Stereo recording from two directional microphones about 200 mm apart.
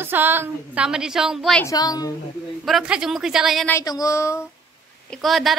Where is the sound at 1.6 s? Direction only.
15° left (ahead or behind).